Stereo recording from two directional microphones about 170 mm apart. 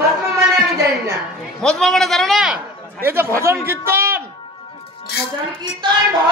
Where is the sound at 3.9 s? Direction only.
15° right (ahead or behind).